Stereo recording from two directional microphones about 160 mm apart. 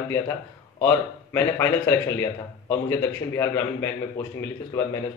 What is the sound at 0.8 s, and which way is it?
A man's voice, 15° left (ahead or behind).